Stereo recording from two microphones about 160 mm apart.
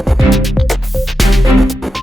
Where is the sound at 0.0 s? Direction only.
Centre (ahead or behind).